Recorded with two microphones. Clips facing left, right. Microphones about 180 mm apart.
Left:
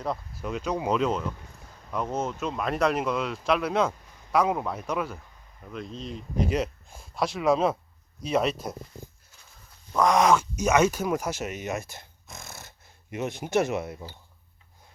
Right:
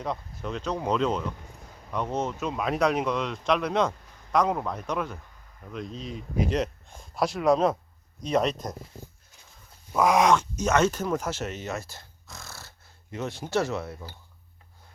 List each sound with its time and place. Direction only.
0.0 s speech: 5° left (ahead or behind)
9.9 s speech: 5° right (ahead or behind); by 14.1 s 20° left (ahead or behind)